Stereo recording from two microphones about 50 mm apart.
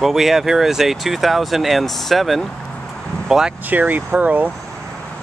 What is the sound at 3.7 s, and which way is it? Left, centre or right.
Speech, right.